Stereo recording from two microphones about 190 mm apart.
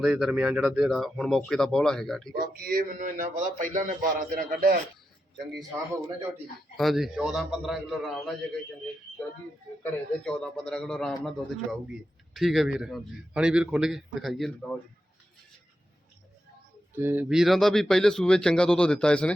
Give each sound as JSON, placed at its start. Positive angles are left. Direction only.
{"t": 0.0, "sound": "a man's voice", "side_deg": 0}
{"t": 2.3, "sound": "speech", "side_deg": -50}
{"t": 6.7, "sound": "a man's voice", "side_deg": 0}
{"t": 9.8, "sound": "a man's voice", "side_deg": 5}
{"t": 16.9, "sound": "a man's voice", "side_deg": -10}